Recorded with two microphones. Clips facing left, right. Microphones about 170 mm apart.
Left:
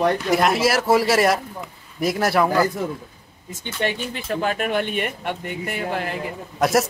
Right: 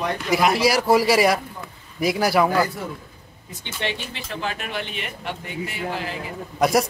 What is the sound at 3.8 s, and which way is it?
Speech, 50° left (ahead or behind).